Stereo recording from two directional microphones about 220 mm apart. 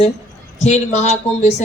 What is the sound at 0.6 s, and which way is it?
Speech, 30° left (ahead or behind).